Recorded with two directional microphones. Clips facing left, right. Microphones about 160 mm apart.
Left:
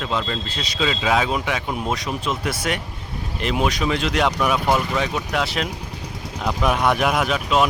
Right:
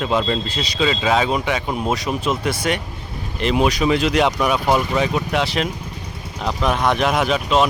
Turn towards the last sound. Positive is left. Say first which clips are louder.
# right 2 dB
turn(degrees=0)  # may be behind; listen again after turning